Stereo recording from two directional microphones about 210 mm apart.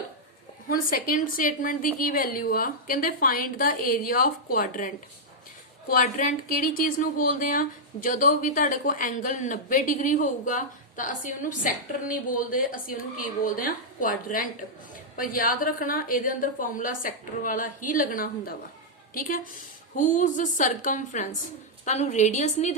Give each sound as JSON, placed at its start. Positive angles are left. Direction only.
{"t": 0.7, "sound": "a woman's voice", "side_deg": 45}
{"t": 5.9, "sound": "speech", "side_deg": 40}